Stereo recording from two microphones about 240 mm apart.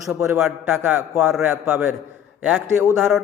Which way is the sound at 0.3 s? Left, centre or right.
Centre.